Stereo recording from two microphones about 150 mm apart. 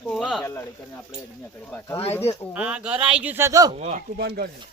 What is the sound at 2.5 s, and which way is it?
Speech, 10° right (ahead or behind).